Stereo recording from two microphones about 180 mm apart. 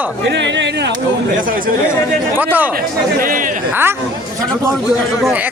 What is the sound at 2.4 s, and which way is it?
Speech, 10° right (ahead or behind).